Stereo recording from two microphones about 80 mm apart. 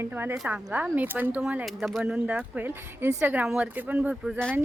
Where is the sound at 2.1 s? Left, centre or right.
Centre.